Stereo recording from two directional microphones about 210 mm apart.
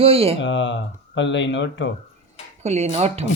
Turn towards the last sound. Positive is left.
turn(degrees=-30)  # may be behind; listen again after turning